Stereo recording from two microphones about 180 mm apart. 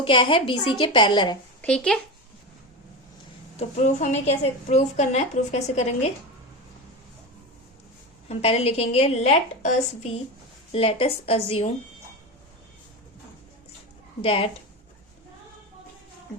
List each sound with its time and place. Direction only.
0.0 s a woman's voice: 30° left (ahead or behind)
1.6 s a child's voice: 5° left (ahead or behind)
3.6 s a woman's voice: 40° left (ahead or behind)
8.3 s a woman's voice: 35° left (ahead or behind)
14.2 s a woman's voice: 30° left (ahead or behind)